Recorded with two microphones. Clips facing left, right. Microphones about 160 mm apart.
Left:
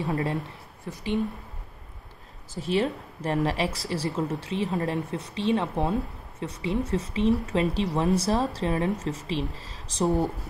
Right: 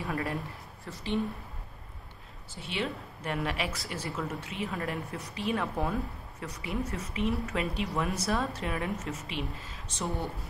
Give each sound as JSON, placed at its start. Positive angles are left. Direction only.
{"t": 0.1, "sound": "a woman's voice", "side_deg": 20}
{"t": 2.5, "sound": "speech", "side_deg": 40}